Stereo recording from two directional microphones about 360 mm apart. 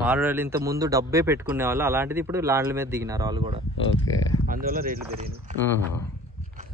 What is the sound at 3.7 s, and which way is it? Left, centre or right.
Speech, left.